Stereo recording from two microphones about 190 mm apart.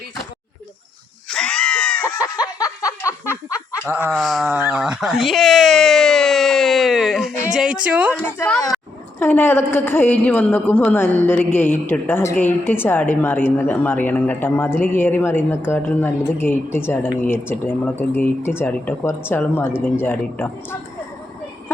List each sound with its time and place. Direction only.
1.3 s screaming: 5° left (ahead or behind)
2.6 s a sound: 15° left (ahead or behind)
3.8 s speech: 10° right (ahead or behind)
8.2 s a woman's voice: 10° left (ahead or behind)